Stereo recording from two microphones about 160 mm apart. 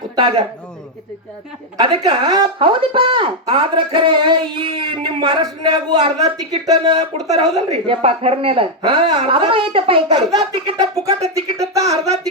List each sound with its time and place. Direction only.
0.2 s a man's voice: 30° right (ahead or behind)
1.8 s speech: 25° right (ahead or behind)
11.7 s a sound: 20° right (ahead or behind)